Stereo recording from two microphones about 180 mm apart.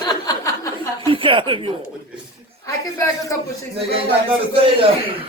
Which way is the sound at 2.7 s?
15° left (ahead or behind).